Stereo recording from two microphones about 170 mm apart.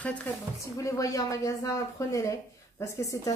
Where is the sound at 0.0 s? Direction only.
10° left (ahead or behind).